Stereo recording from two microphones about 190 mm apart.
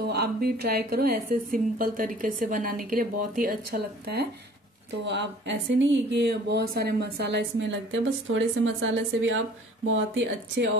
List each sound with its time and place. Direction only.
0.0 s speech: 50° right (ahead or behind)
5.0 s speech: 65° right (ahead or behind); by 10.7 s 90° right